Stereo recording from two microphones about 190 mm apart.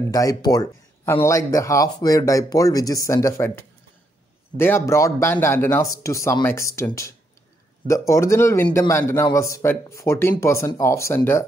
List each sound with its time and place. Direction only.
0.1 s speech: 20° left (ahead or behind)